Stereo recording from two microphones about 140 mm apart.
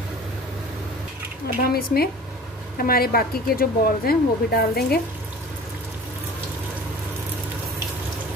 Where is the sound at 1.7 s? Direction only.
90° left.